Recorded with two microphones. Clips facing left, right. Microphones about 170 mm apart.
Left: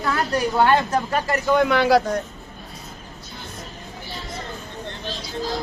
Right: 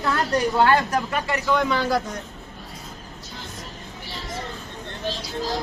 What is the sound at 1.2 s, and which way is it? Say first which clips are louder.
Speech: left 3 dB; 45° left (ahead or behind).